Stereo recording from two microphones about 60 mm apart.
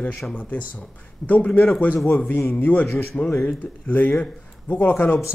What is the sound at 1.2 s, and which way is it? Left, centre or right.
Speech, left.